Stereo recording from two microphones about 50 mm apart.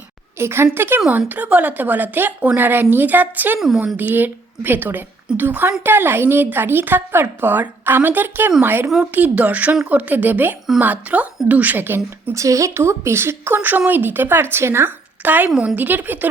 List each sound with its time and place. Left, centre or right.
0.3 s a woman's voice: right
1.3 s a woman's voice: right
9.1 s a woman's voice: right
11.8 s a woman's voice: right
12.3 s a woman's voice: right
13.6 s a woman's voice: right
14.8 s a sound: right
15.6 s a woman's voice: right